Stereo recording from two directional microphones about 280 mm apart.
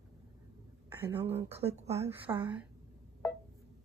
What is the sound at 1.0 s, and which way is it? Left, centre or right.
Speech, centre.